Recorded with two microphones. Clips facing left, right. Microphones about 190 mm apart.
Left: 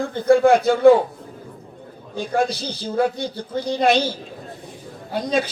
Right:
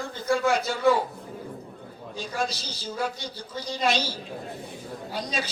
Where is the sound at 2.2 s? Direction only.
55° left (ahead or behind).